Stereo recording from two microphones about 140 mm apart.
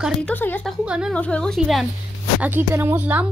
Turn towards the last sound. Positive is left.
turn(degrees=-10)  # may be behind; listen again after turning